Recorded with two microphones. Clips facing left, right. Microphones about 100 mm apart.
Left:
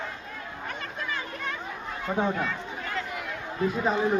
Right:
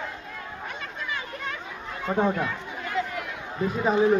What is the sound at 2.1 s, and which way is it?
Speech, 5° right (ahead or behind).